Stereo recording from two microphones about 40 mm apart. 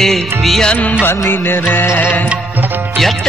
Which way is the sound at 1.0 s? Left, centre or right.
Left.